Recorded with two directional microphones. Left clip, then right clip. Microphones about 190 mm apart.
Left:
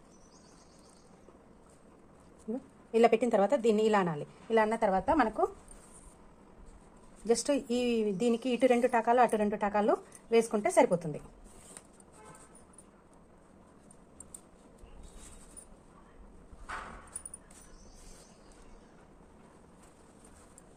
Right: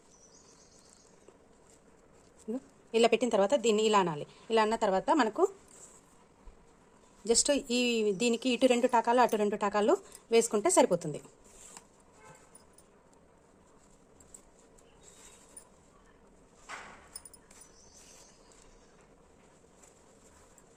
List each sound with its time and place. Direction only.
2.5 s a woman's voice: 35° right (ahead or behind); by 5.5 s 55° right (ahead or behind)
7.4 s a woman's voice: 35° right (ahead or behind)